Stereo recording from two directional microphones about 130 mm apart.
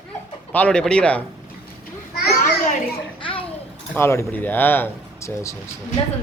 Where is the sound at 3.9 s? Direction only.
20° left (ahead or behind).